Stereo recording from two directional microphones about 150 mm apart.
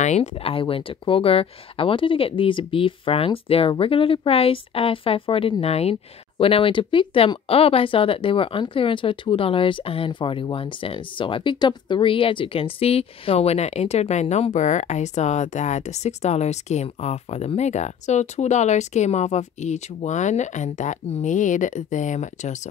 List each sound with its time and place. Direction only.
0.0 s speech: 50° left (ahead or behind)